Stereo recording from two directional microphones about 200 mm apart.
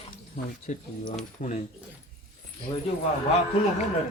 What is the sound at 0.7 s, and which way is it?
Speech, 40° left (ahead or behind).